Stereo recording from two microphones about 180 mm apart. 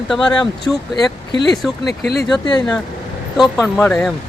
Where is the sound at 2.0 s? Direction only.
65° left (ahead or behind).